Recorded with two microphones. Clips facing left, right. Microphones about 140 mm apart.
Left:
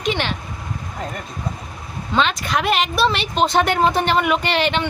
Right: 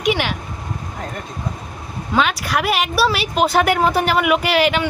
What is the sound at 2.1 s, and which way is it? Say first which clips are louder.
Speech: right 1 dB; 5° right (ahead or behind).